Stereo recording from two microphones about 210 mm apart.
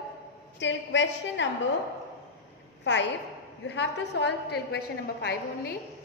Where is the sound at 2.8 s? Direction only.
55° left (ahead or behind).